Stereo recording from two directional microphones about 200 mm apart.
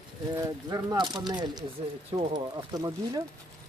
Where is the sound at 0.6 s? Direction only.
20° right (ahead or behind).